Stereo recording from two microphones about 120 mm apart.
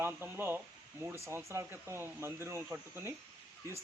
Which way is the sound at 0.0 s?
20° right (ahead or behind).